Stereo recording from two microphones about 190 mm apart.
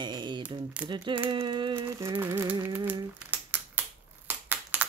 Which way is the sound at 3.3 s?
10° right (ahead or behind).